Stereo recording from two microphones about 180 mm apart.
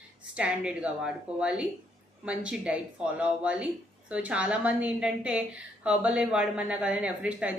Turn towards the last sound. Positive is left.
turn(degrees=-5)  # may be behind; listen again after turning